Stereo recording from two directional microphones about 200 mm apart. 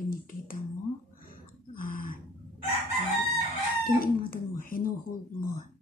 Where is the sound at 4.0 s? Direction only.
45° left (ahead or behind).